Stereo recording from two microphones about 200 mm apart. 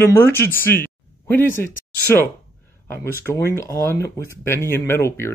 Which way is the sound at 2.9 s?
10° left (ahead or behind).